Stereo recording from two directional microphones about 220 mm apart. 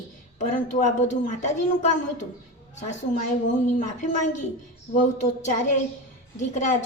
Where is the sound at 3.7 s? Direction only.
35° left (ahead or behind).